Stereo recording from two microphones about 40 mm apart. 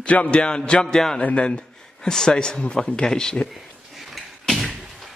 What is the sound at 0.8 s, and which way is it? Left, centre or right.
Speech, centre.